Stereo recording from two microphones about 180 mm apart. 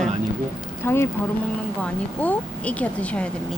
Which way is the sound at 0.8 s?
15° left (ahead or behind).